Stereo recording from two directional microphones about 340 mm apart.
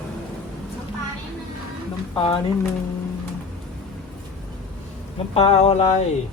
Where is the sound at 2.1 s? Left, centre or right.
Centre.